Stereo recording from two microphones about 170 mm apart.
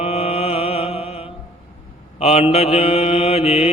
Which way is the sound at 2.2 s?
35° left (ahead or behind).